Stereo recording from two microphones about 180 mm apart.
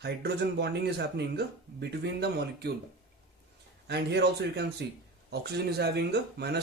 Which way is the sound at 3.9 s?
65° right (ahead or behind).